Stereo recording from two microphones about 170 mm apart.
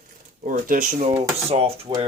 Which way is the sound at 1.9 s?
30° right (ahead or behind).